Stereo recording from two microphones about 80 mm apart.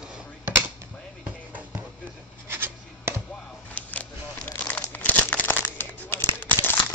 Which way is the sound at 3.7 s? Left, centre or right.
Centre.